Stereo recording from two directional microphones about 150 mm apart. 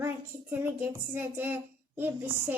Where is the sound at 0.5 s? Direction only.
15° right (ahead or behind).